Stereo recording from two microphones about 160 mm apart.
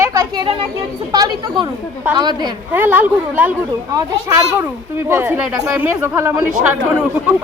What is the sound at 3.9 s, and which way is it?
A woman's voice, 20° right (ahead or behind).